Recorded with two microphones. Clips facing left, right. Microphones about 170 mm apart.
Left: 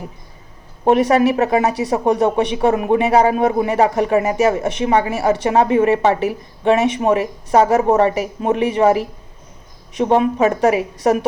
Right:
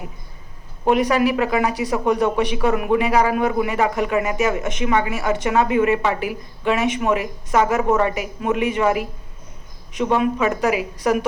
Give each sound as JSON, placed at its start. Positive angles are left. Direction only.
{"t": 0.9, "sound": "speech", "side_deg": 25}
{"t": 10.4, "sound": "speech", "side_deg": 30}